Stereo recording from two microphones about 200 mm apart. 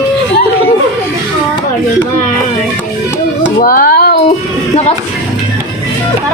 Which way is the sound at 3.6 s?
45° left (ahead or behind).